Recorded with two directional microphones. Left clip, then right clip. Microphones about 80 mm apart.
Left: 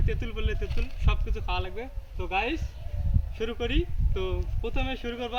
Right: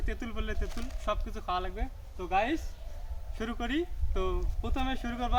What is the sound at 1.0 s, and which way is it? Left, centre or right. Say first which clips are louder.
Speech: right 2 dB; right.